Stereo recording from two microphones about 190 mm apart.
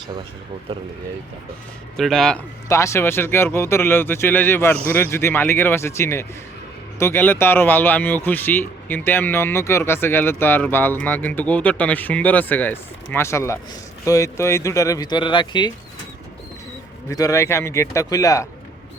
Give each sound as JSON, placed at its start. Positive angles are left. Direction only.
{"t": 2.0, "sound": "speech", "side_deg": 0}
{"t": 2.6, "sound": "speech", "side_deg": 15}
{"t": 17.1, "sound": "speech", "side_deg": 15}